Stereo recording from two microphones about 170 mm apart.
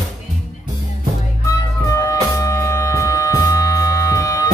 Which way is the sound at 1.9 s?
20° left (ahead or behind).